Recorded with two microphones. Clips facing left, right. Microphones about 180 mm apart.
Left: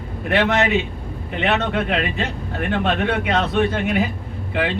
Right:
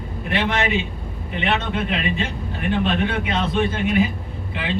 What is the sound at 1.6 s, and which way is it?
Speech, 65° left (ahead or behind).